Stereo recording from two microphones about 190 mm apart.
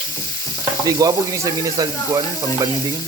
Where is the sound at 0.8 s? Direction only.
20° right (ahead or behind).